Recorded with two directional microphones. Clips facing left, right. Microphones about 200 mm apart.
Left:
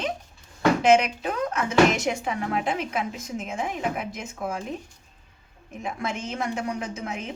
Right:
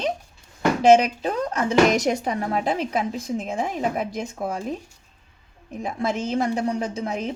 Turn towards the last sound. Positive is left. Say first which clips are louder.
# right 5 dB
turn(degrees=-35)  # may be behind; listen again after turning